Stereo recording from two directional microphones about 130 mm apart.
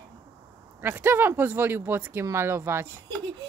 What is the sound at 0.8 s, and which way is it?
Speech, 15° right (ahead or behind).